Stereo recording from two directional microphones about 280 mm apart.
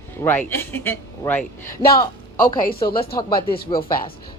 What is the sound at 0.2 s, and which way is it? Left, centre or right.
Speech, centre.